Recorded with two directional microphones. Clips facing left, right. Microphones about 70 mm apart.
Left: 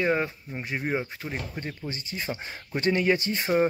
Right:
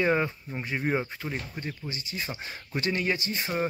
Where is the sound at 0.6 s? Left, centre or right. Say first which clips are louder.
Even; centre.